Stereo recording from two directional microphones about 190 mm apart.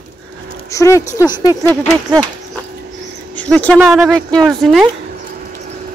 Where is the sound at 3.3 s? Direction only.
5° left (ahead or behind).